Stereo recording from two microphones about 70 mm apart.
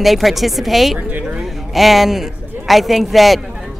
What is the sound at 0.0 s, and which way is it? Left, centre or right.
Speech, centre.